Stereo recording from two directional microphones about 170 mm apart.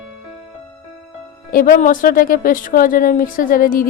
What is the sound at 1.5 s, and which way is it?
Speech, 55° left (ahead or behind).